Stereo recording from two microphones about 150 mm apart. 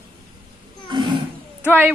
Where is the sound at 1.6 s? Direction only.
15° right (ahead or behind).